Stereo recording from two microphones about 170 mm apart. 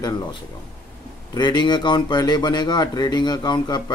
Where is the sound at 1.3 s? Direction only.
25° left (ahead or behind).